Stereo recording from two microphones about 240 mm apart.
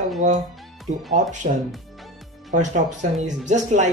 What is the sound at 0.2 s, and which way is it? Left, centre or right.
Speech, right.